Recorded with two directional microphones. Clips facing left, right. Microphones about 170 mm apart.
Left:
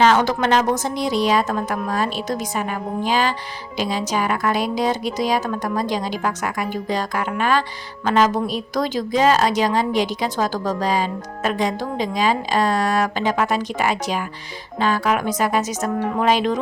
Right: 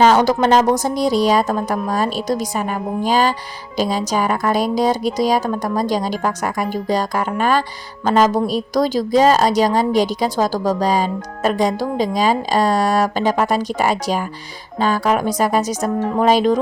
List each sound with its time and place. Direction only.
0.0 s a woman's voice: 40° right (ahead or behind)